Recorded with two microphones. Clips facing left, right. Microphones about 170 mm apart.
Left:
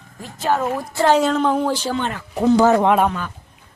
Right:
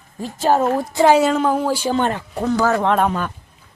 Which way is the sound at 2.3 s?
20° left (ahead or behind).